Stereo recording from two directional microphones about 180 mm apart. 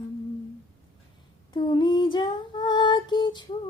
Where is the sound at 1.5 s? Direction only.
25° left (ahead or behind).